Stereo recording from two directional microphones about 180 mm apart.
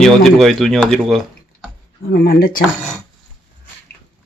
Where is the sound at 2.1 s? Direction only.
55° left (ahead or behind).